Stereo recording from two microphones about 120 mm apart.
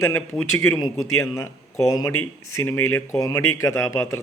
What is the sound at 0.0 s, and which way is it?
A man's voice, 20° left (ahead or behind).